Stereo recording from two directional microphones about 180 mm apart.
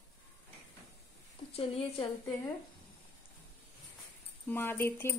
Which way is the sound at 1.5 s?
35° left (ahead or behind).